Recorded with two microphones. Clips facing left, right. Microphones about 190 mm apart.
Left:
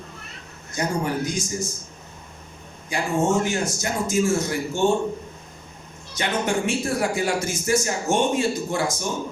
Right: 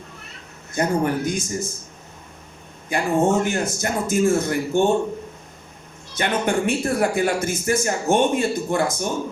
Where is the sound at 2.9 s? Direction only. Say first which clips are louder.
Right 3 dB; 55° right (ahead or behind).